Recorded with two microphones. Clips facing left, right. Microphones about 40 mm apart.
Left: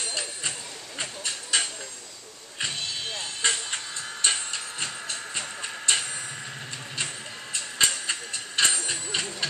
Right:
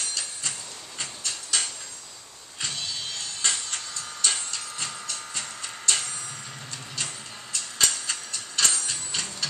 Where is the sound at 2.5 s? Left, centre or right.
Left.